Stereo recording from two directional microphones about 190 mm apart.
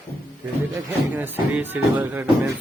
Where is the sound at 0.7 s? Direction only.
10° right (ahead or behind).